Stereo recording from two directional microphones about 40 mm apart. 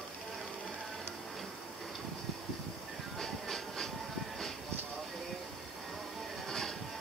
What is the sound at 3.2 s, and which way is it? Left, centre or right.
Train, centre.